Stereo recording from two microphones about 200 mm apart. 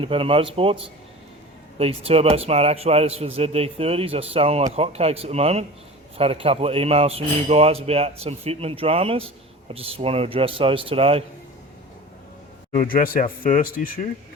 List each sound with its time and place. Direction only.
0.0 s a man's voice: 25° right (ahead or behind)
1.8 s a man's voice: 30° right (ahead or behind)
12.7 s speech: 45° left (ahead or behind)